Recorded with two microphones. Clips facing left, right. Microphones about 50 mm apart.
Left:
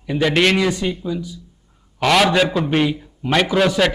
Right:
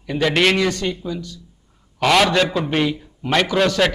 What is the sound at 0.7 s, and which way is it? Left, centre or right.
Speech, centre.